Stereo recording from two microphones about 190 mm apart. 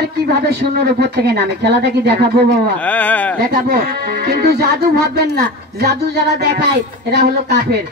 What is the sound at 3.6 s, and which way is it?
Speech, 55° right (ahead or behind).